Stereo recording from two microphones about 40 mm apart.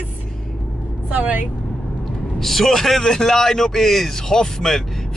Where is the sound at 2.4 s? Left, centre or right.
Centre.